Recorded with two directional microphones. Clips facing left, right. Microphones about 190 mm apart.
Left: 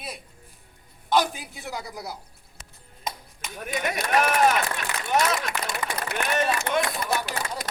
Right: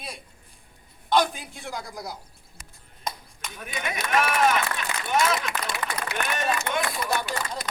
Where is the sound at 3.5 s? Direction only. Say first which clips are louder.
Left 4 dB; 45° left (ahead or behind).